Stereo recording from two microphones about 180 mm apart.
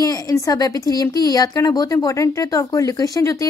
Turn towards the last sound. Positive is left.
turn(degrees=20)  # may be behind; listen again after turning